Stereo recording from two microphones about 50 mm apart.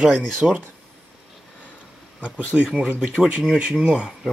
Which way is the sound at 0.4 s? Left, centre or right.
Right.